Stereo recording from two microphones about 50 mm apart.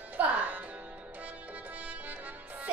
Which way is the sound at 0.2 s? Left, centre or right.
Right.